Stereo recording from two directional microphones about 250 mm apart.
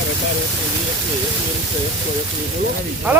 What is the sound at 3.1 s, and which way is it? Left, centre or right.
Speech, centre.